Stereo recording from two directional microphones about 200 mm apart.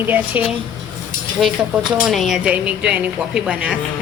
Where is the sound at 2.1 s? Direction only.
Centre (ahead or behind).